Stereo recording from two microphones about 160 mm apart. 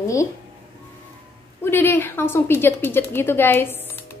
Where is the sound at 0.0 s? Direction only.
20° left (ahead or behind).